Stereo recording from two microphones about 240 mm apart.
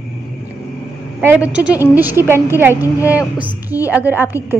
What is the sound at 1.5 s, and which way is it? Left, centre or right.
A woman's voice, centre.